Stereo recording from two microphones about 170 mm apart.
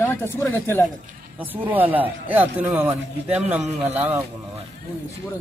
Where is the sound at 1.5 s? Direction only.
10° right (ahead or behind).